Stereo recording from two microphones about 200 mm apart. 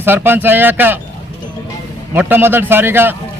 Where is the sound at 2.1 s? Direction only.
10° right (ahead or behind).